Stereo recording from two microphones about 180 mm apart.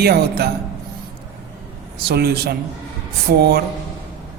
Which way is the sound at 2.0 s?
65° right (ahead or behind).